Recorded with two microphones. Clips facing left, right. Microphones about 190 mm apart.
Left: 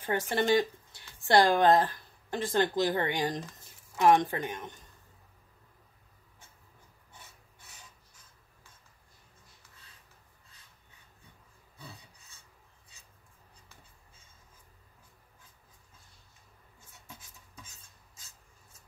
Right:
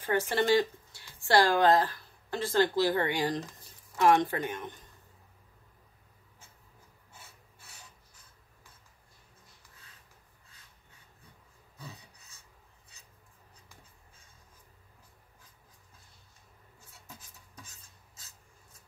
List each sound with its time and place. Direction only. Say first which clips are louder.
0.0 s speech: right 1 dB; 15° left (ahead or behind)